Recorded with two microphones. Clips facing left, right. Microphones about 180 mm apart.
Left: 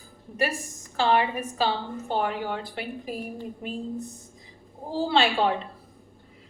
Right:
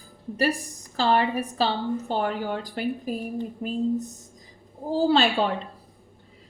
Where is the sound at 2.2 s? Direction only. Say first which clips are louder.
Right 2 dB; 40° right (ahead or behind).